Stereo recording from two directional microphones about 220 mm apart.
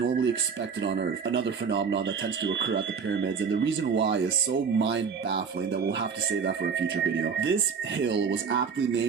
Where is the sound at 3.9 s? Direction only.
55° right (ahead or behind).